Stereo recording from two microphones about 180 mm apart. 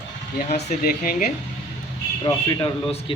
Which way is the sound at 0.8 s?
55° left (ahead or behind).